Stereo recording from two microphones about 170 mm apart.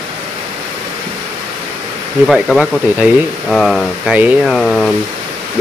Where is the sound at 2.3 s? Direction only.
Centre (ahead or behind).